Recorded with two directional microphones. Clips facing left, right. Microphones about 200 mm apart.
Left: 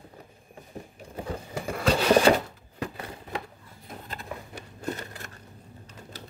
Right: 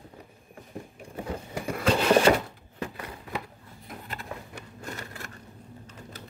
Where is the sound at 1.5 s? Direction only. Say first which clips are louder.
Even; 30° left (ahead or behind).